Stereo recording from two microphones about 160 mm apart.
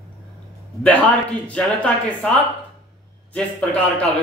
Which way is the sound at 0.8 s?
10° left (ahead or behind).